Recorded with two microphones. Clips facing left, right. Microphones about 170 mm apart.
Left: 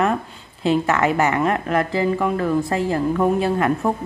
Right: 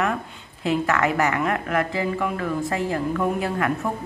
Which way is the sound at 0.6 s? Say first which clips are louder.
Left 3 dB; 25° left (ahead or behind).